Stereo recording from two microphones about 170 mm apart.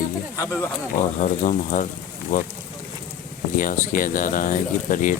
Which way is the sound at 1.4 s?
50° left (ahead or behind).